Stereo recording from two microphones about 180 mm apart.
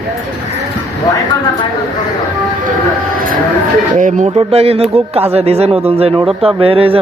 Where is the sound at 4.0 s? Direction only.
45° right (ahead or behind).